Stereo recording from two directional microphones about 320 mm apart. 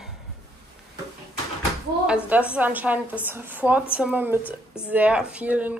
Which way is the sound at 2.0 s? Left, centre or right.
Centre.